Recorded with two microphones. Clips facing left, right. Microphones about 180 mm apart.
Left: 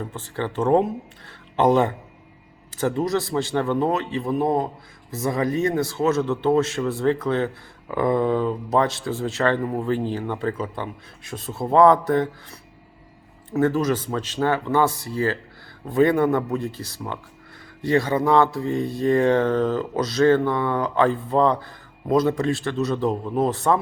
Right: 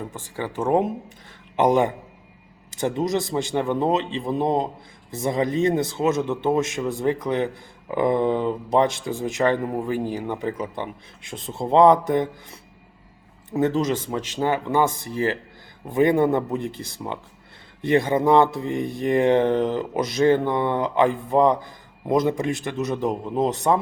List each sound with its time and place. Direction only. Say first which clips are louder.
0.1 s speech: left 2 dB; 10° right (ahead or behind)